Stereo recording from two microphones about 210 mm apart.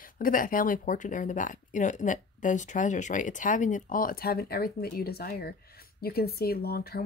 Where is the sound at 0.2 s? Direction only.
40° left (ahead or behind).